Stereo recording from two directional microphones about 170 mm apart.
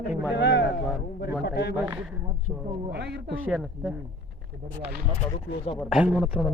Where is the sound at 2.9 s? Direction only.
80° right.